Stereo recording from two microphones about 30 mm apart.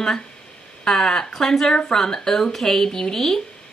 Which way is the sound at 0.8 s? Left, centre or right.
Centre.